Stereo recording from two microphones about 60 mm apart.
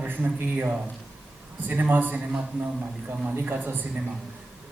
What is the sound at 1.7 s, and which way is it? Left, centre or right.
Speech, right.